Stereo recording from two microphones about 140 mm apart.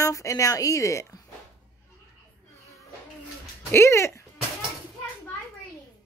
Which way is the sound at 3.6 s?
20° left (ahead or behind).